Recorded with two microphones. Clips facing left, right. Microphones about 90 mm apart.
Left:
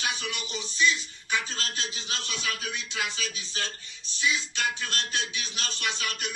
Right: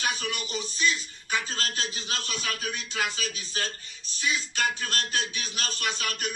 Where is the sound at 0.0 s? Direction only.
45° right (ahead or behind).